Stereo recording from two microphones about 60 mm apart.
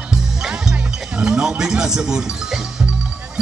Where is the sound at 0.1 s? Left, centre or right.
Centre.